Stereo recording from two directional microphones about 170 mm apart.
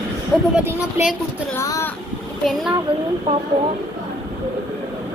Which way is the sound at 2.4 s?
Centre (ahead or behind).